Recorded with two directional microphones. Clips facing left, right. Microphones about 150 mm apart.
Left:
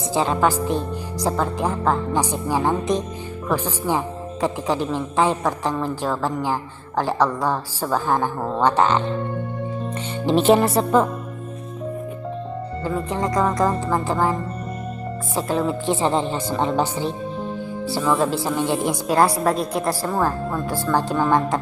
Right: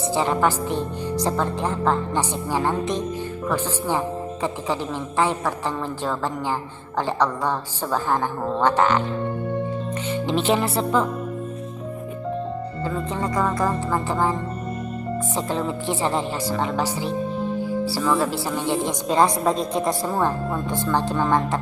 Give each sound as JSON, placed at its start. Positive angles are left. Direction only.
{"t": 0.1, "sound": "a woman's voice", "side_deg": 15}
{"t": 10.2, "sound": "a woman's voice", "side_deg": 40}
{"t": 12.8, "sound": "a woman's voice", "side_deg": 15}
{"t": 15.4, "sound": "a woman's voice", "side_deg": 10}
{"t": 18.0, "sound": "a woman's voice", "side_deg": 10}